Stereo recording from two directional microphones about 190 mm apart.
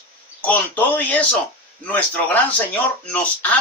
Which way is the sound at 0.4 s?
10° left (ahead or behind).